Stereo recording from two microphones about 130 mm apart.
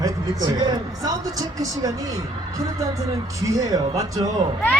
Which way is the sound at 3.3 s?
25° right (ahead or behind).